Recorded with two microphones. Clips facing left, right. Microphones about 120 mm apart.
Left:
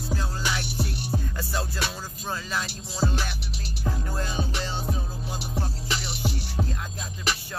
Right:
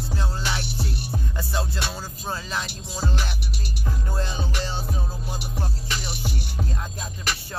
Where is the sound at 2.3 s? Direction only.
25° right (ahead or behind).